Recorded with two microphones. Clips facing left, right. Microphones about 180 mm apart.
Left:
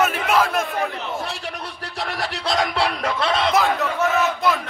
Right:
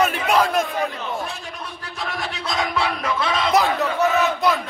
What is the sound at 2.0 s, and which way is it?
Speech, 70° left (ahead or behind).